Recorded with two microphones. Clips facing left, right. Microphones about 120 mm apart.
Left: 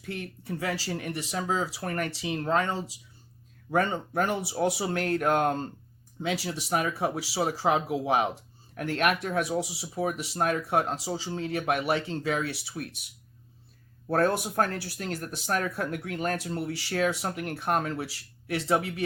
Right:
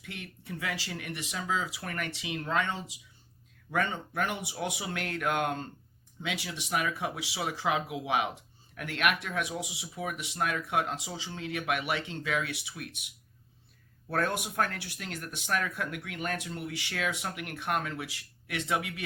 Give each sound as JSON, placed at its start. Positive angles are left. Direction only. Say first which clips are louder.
{"t": 0.0, "sound": "speech", "louder": "left 7 dB", "side_deg": 35}
{"t": 14.1, "sound": "speech", "louder": "left 6 dB", "side_deg": 35}